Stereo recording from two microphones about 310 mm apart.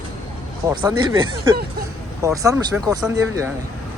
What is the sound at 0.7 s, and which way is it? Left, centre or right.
Speech, centre.